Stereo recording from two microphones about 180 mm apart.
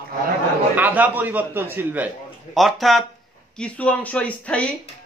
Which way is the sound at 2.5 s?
Centre (ahead or behind).